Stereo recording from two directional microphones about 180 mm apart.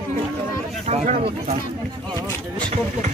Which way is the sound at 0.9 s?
40° right (ahead or behind).